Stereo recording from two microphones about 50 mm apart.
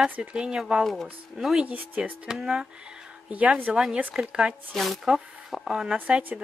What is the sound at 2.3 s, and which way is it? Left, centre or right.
Speech, centre.